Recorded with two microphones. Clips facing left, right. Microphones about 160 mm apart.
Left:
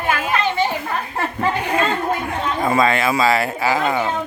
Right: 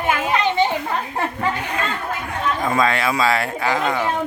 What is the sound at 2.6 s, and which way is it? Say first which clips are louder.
A man's voice: left 3 dB; 5° left (ahead or behind).